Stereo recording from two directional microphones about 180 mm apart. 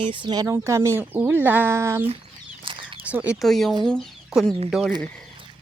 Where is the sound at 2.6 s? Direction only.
30° right (ahead or behind).